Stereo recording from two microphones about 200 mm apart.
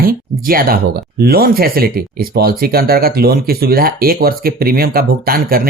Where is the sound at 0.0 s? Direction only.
45° right (ahead or behind).